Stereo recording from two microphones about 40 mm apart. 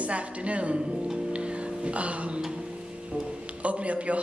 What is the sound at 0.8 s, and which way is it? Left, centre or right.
Music, centre.